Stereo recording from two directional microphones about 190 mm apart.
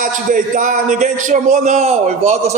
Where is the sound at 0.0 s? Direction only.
45° right (ahead or behind).